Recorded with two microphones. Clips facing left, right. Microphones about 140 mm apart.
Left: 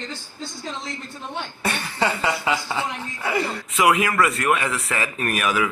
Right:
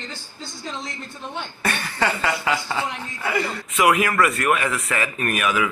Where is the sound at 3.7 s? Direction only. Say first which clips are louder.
Even; 25° left (ahead or behind).